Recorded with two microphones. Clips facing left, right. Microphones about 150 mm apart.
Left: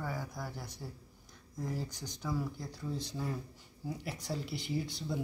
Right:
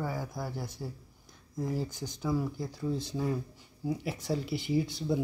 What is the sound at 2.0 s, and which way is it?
Speech, 20° right (ahead or behind).